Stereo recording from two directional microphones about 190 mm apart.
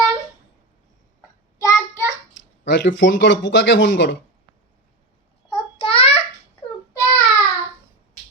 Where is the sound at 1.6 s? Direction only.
15° left (ahead or behind).